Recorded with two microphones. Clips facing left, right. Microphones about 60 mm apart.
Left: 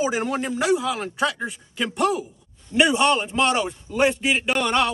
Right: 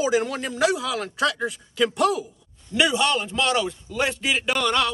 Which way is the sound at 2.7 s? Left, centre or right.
Left.